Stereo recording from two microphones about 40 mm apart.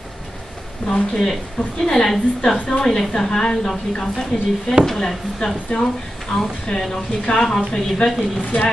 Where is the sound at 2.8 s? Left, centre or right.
Centre.